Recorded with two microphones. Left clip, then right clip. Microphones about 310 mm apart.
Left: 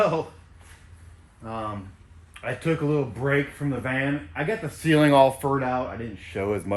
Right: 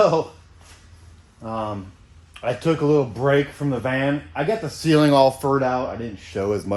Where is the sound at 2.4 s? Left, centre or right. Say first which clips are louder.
Right 5 dB; centre.